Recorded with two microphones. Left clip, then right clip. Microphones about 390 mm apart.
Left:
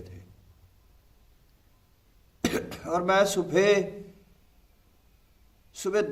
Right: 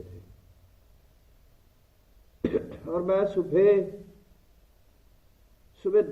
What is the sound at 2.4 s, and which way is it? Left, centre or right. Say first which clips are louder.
A man's voice: right 1 dB; centre.